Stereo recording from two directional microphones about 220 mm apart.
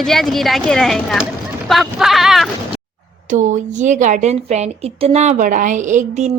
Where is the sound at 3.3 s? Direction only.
35° right (ahead or behind).